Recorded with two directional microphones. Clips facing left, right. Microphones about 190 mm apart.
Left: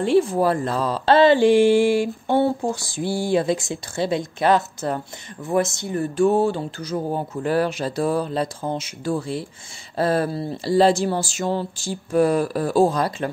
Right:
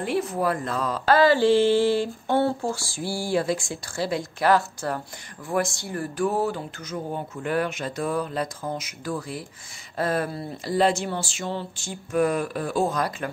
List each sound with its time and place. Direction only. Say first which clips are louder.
0.0 s speech: left 7 dB; 30° left (ahead or behind)